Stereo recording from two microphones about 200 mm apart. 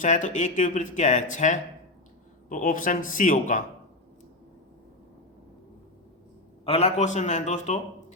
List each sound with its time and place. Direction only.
0.0 s speech: 40° left (ahead or behind)
6.7 s speech: 30° left (ahead or behind)